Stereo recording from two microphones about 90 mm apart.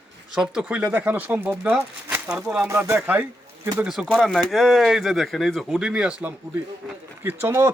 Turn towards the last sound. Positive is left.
turn(degrees=-25)  # may be behind; listen again after turning